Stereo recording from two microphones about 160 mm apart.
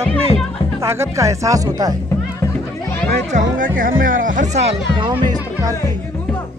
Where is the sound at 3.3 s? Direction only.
55° right (ahead or behind).